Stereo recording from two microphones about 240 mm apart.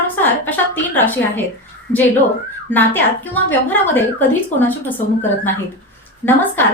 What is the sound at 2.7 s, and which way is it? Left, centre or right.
Speech, centre.